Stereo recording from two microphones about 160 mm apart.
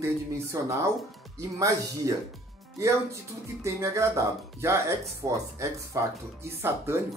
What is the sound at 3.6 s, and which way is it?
Speech, 20° right (ahead or behind).